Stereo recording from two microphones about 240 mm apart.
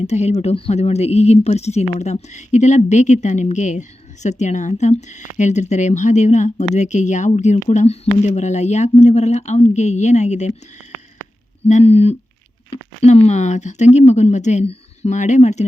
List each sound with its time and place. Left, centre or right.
0.0 s speech: left
11.6 s speech: left